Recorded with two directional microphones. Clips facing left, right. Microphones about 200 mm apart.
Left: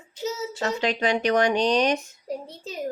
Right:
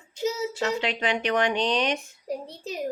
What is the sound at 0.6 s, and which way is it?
Speech, 40° left (ahead or behind).